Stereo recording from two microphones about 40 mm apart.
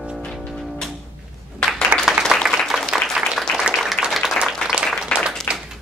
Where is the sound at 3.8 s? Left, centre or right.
Centre.